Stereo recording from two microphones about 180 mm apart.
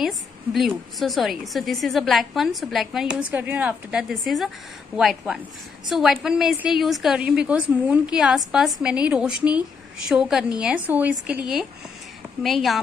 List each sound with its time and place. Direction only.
0.0 s a woman's voice: centre (ahead or behind)